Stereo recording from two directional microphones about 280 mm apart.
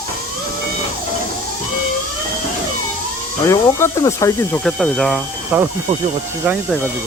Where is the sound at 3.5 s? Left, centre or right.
Centre.